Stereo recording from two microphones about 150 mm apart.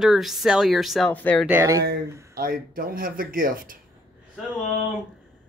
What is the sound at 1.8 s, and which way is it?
Speech, 90° right.